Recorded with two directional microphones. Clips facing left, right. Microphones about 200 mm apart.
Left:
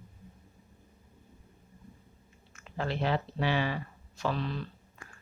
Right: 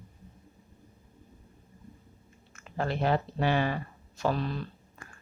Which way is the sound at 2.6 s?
45° right (ahead or behind).